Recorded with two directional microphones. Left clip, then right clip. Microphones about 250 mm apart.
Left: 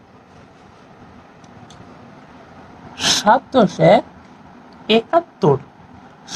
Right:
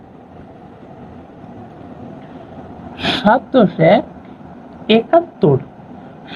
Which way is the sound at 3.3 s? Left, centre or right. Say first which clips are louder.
Right 2 dB; centre.